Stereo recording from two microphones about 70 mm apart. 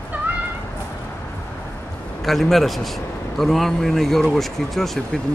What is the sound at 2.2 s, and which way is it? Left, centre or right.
Speech, centre.